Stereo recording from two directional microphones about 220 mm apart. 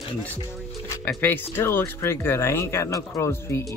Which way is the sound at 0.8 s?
10° left (ahead or behind).